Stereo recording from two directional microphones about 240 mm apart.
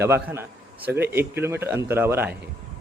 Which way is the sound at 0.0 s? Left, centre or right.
Centre.